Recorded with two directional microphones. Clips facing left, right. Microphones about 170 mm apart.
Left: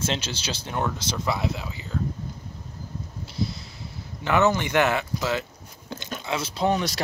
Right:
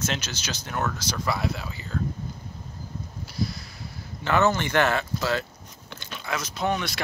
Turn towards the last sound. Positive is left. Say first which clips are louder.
# left 3 dB
turn(degrees=35)  # may be behind; listen again after turning